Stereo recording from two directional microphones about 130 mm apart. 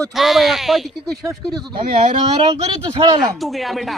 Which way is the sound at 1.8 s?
75° right (ahead or behind).